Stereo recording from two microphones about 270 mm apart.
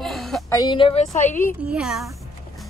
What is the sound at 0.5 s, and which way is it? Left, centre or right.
A woman's voice, centre.